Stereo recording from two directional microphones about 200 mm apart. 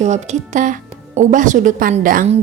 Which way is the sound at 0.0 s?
35° right (ahead or behind).